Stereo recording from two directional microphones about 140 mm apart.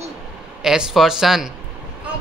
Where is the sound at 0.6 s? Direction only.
5° right (ahead or behind).